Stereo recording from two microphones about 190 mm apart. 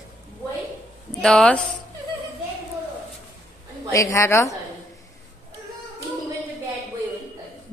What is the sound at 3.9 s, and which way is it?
Speech, 15° left (ahead or behind).